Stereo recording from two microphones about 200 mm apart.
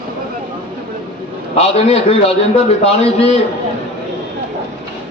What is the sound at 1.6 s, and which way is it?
A man's voice, 30° left (ahead or behind).